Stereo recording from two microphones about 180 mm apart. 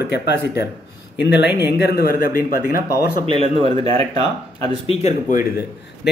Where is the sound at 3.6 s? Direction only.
35° right (ahead or behind).